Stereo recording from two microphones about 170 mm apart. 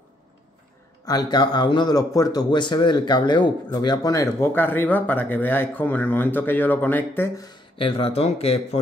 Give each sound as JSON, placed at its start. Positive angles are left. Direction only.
{"t": 1.0, "sound": "speech", "side_deg": 25}
{"t": 7.7, "sound": "speech", "side_deg": 35}